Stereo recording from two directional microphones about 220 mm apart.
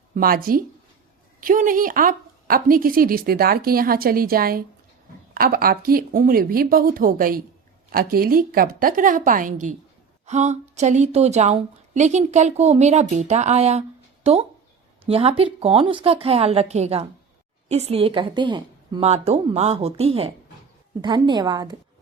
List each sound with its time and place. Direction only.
0.1 s a woman's voice: 40° right (ahead or behind)
15.0 s a woman's voice: 25° right (ahead or behind)